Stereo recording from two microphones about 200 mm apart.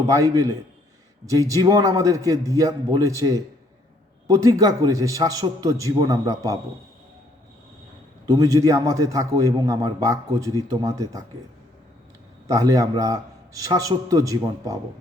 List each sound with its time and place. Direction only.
0.1 s a man's voice: 15° right (ahead or behind)
8.3 s a man's voice: 15° right (ahead or behind)
12.5 s a man's voice: 15° right (ahead or behind)